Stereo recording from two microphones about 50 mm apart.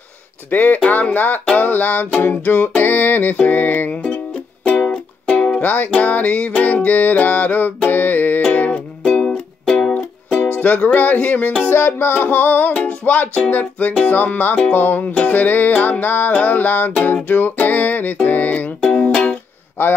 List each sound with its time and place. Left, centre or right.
0.5 s music: left
5.6 s music: left
9.0 s music: centre
10.5 s music: left
11.7 s music: left